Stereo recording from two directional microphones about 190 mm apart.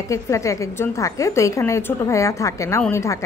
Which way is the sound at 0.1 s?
15° left (ahead or behind).